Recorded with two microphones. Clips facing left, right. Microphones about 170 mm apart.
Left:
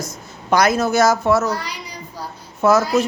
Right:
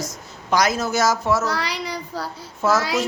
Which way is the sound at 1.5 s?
85° right.